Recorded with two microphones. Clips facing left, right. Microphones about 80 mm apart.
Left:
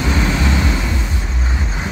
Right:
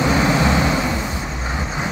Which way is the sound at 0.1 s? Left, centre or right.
Right.